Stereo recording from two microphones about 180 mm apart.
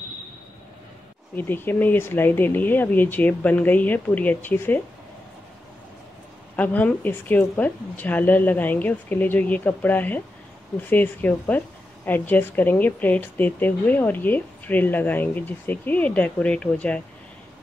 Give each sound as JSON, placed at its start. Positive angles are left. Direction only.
{"t": 1.3, "sound": "a woman's voice", "side_deg": 10}
{"t": 6.5, "sound": "a woman's voice", "side_deg": 10}